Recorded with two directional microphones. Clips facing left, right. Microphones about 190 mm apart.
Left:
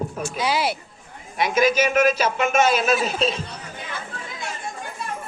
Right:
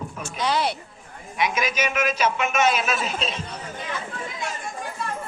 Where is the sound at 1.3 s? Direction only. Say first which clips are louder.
Left 6 dB; 35° left (ahead or behind).